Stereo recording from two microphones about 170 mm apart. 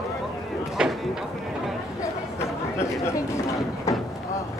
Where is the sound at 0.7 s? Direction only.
5° right (ahead or behind).